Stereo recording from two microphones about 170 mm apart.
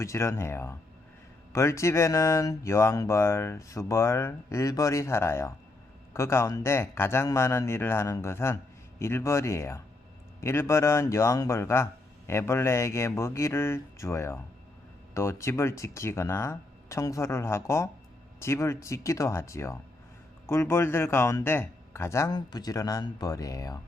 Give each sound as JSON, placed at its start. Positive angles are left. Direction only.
{"t": 0.0, "sound": "speech", "side_deg": 15}